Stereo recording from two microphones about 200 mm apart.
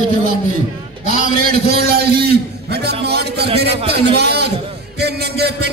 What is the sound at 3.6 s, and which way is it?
Speech, 55° right (ahead or behind).